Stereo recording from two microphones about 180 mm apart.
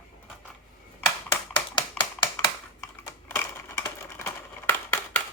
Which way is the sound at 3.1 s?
10° left (ahead or behind).